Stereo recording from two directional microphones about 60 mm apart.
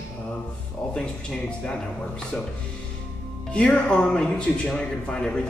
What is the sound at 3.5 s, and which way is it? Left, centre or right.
Speech, centre.